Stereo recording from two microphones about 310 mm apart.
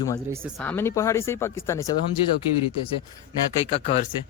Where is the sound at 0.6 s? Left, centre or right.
Centre.